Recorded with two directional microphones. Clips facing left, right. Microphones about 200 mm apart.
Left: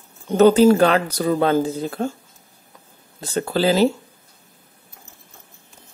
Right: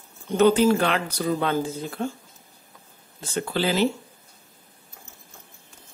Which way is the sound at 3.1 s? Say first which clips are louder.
Left 5 dB; 40° left (ahead or behind).